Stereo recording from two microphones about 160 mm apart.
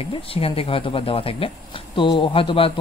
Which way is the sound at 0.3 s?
35° left (ahead or behind).